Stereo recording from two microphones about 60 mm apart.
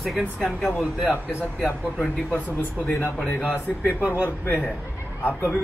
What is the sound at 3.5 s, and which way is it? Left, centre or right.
Speech, right.